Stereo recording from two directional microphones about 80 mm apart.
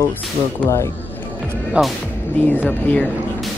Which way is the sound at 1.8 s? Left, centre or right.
Centre.